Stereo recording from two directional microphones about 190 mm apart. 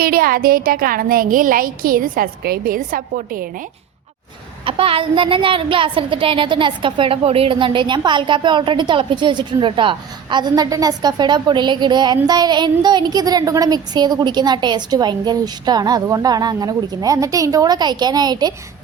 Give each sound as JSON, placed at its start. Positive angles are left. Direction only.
{"t": 0.0, "sound": "speech", "side_deg": -50}
{"t": 4.6, "sound": "a woman's voice", "side_deg": -30}